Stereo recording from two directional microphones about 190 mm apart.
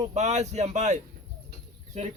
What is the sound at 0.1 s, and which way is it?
Speech, 35° right (ahead or behind).